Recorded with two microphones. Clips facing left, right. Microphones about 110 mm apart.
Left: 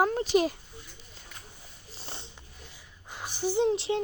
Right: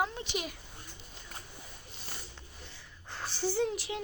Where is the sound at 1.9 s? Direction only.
30° left (ahead or behind).